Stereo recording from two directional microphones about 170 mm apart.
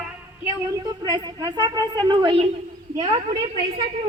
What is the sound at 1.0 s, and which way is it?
A woman's voice, 25° right (ahead or behind).